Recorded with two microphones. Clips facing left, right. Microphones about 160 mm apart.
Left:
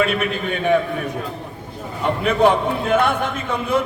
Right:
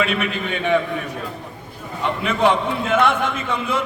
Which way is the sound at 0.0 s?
45° left (ahead or behind).